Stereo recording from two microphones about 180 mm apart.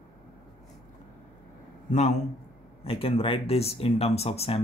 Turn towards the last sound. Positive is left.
turn(degrees=35)  # may be behind; listen again after turning